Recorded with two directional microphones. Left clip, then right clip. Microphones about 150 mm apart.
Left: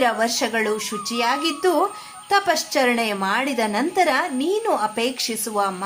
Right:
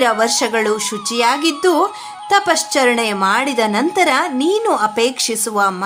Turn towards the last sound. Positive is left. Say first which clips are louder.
# right 6 dB
turn(degrees=-30)  # may be behind; listen again after turning